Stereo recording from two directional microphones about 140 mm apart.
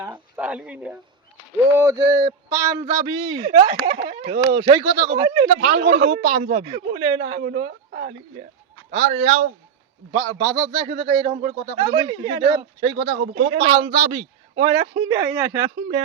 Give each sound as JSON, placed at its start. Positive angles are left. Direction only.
{"t": 0.3, "sound": "speech", "side_deg": -10}
{"t": 1.7, "sound": "speech", "side_deg": -20}
{"t": 3.2, "sound": "speech", "side_deg": -35}
{"t": 5.5, "sound": "speech", "side_deg": -60}
{"t": 5.8, "sound": "a man's voice", "side_deg": -45}
{"t": 10.2, "sound": "speech", "side_deg": -30}
{"t": 10.8, "sound": "speech", "side_deg": -45}
{"t": 13.8, "sound": "speech", "side_deg": -35}
{"t": 15.1, "sound": "speech", "side_deg": -20}